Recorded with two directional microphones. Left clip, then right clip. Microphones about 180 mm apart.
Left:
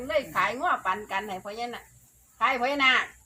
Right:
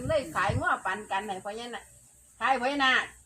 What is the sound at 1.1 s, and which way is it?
Speech, 70° left (ahead or behind).